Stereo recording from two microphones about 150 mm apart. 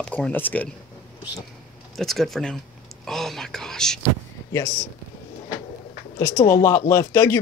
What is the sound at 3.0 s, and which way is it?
Whispering, centre (ahead or behind).